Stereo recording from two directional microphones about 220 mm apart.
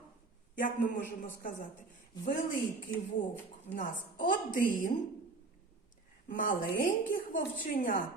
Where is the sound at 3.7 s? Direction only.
35° left (ahead or behind).